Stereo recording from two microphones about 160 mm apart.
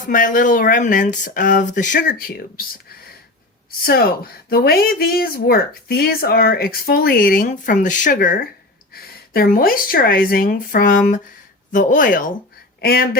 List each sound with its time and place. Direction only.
0.0 s speech: 55° left (ahead or behind)
3.8 s speech: 70° left (ahead or behind)
8.9 s speech: 70° left (ahead or behind)
12.8 s speech: 70° left (ahead or behind)